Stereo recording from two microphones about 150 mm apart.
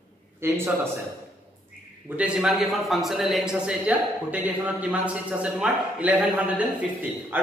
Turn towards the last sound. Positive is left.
turn(degrees=-15)  # may be behind; listen again after turning